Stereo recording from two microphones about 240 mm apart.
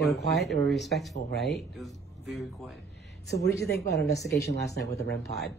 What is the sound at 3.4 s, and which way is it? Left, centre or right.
Speech, left.